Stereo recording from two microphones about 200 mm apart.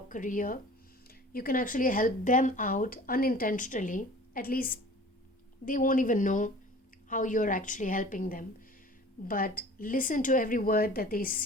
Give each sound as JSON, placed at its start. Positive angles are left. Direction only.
{"t": 0.1, "sound": "a woman's voice", "side_deg": 40}